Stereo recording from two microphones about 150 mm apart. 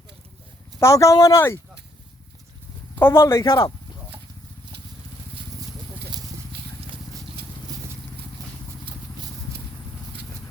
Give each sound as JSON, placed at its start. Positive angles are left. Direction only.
{"t": 0.8, "sound": "speech", "side_deg": 20}
{"t": 2.9, "sound": "a man's voice", "side_deg": 15}
{"t": 3.4, "sound": "speech", "side_deg": 30}
{"t": 8.4, "sound": "vehicle", "side_deg": -25}